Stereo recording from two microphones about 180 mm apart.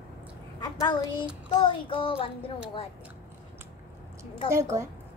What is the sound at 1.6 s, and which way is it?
Speech, 30° left (ahead or behind).